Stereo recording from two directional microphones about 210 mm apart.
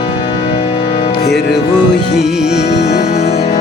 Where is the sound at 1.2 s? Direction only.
50° left (ahead or behind).